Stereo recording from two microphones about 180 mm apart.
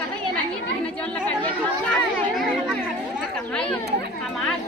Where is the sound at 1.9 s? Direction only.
Centre (ahead or behind).